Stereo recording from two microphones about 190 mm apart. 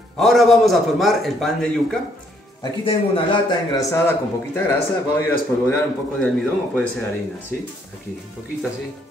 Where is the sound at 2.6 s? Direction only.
30° left (ahead or behind).